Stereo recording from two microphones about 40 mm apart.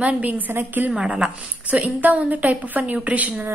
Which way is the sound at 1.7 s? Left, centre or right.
Right.